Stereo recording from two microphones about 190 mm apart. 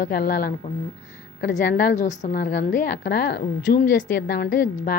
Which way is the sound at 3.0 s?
60° left (ahead or behind).